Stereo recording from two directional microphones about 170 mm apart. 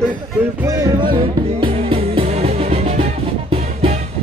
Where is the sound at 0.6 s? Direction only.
20° right (ahead or behind); by 4.0 s 35° right (ahead or behind).